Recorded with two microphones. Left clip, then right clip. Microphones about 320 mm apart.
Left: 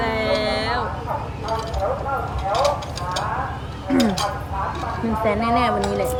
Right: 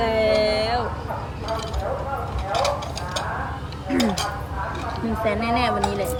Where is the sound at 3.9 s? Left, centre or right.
Centre.